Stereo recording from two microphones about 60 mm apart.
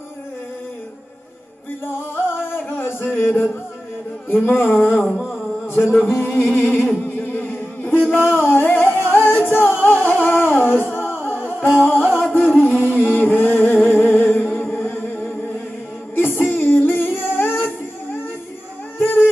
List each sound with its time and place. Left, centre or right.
1.9 s music: left
12.0 s music: centre
12.6 s music: left
16.2 s music: left
18.9 s a sound: left